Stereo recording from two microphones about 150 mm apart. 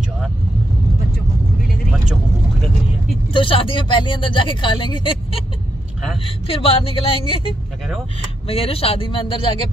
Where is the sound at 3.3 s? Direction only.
35° left (ahead or behind).